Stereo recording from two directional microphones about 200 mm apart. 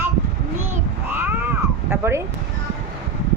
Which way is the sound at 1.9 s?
15° right (ahead or behind).